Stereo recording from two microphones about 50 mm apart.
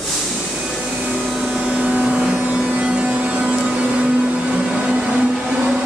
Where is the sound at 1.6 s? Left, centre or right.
Right.